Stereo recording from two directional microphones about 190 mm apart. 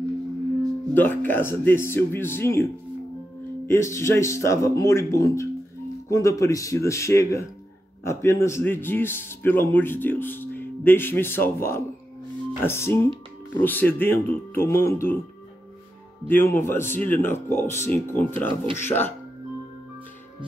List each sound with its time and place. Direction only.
0.9 s a man's voice: 10° left (ahead or behind)
3.6 s a man's voice: 15° left (ahead or behind)
16.3 s a man's voice: 10° left (ahead or behind)